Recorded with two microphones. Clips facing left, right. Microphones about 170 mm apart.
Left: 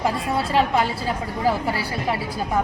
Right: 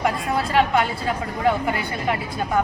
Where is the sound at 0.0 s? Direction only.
30° left (ahead or behind).